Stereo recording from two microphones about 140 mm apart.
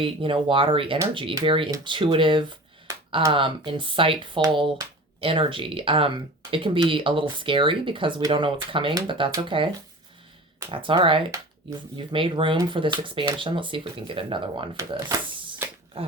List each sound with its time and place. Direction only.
0.0 s speech: 40° right (ahead or behind)
2.9 s a sound: 20° right (ahead or behind)
3.3 s speech: 40° right (ahead or behind)
10.7 s speech: 35° right (ahead or behind)